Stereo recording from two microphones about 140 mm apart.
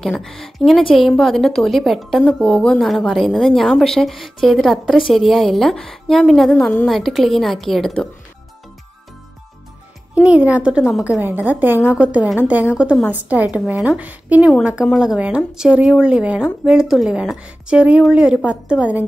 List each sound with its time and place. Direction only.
0.0 s a woman's voice: centre (ahead or behind)
10.1 s a woman's voice: 10° right (ahead or behind)